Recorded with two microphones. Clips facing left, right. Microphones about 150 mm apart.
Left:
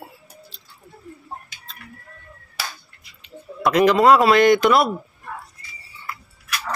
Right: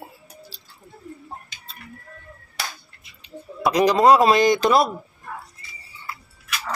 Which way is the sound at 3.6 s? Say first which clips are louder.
Left 2 dB; 15° right (ahead or behind).